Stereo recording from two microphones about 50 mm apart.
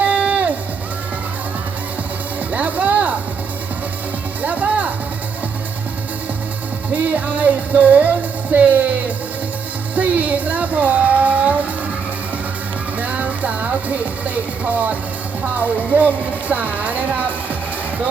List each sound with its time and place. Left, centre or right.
0.0 s music: right
2.5 s music: right
4.4 s music: right
6.9 s music: right
9.9 s a sound: right
13.0 s music: right
15.5 s speech: right